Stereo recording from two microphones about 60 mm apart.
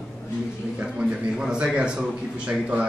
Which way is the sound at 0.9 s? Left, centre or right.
Centre.